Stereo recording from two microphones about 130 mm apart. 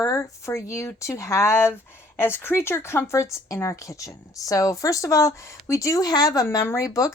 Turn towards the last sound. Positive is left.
turn(degrees=25)  # may be behind; listen again after turning